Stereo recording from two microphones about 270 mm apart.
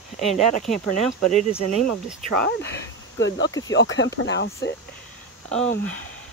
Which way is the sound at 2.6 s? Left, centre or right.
Left.